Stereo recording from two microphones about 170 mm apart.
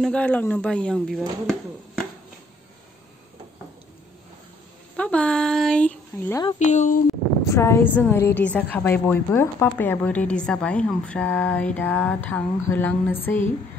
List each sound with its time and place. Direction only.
0.0 s speech: 5° left (ahead or behind)
4.9 s speech: 5° left (ahead or behind)
6.6 s speech: 45° left (ahead or behind)
7.4 s a woman's voice: 15° left (ahead or behind)